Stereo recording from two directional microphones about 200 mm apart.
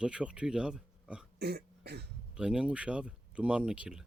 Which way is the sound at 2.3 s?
5° right (ahead or behind).